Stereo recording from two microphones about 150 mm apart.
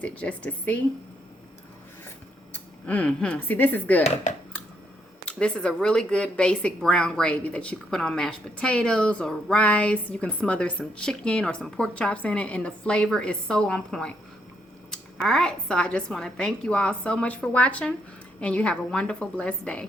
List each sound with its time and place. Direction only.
0.0 s speech: 10° left (ahead or behind)
2.5 s speech: 10° left (ahead or behind)
4.0 s speech: 50° left (ahead or behind)
5.2 s speech: 5° left (ahead or behind)